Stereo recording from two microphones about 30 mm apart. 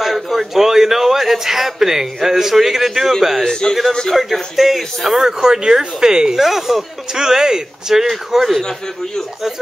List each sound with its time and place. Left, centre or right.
0.0 s a man's voice: centre
5.2 s speech: right
6.3 s speech: centre
7.2 s speech: right